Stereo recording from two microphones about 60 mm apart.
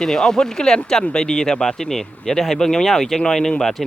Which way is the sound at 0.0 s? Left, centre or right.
Centre.